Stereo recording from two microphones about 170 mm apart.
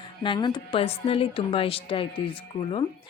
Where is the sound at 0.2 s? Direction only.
30° left (ahead or behind).